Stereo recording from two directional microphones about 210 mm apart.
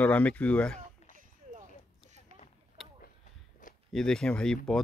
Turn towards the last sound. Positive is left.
turn(degrees=5)  # may be behind; listen again after turning